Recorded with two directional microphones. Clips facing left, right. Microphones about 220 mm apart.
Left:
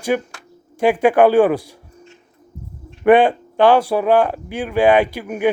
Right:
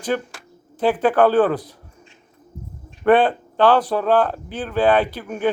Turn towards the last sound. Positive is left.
turn(degrees=10)  # may be behind; listen again after turning